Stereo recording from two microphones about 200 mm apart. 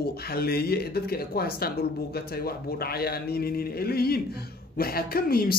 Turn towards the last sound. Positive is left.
turn(degrees=50)  # may be behind; listen again after turning